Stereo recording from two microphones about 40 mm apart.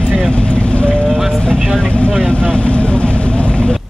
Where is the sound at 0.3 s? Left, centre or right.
Left.